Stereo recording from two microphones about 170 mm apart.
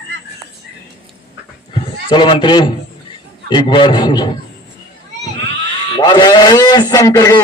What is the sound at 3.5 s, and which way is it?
Speech, 30° left (ahead or behind).